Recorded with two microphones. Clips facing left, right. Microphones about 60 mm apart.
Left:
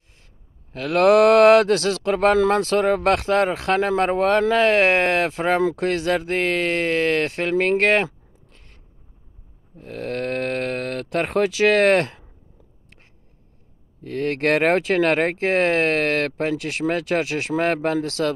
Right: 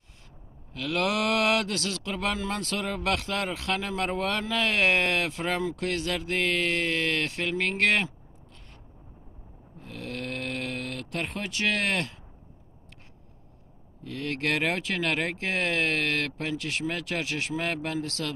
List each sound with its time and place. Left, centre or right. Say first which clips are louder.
0.7 s speech: left 12 dB; left
9.8 s speech: left 9 dB; left
14.0 s speech: left 9 dB; left